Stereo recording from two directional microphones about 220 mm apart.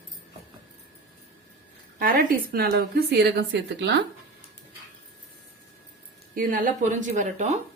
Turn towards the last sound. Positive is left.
turn(degrees=-35)  # may be behind; listen again after turning